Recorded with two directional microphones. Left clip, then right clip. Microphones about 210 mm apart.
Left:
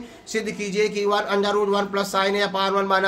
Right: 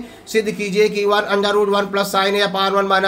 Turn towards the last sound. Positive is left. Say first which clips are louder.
# right 4 dB
turn(degrees=-5)  # may be behind; listen again after turning